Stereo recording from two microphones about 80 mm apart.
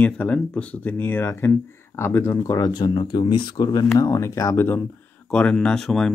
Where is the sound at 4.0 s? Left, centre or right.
Left.